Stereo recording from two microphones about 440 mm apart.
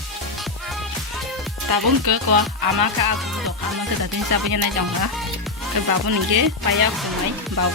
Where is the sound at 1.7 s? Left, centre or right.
Right.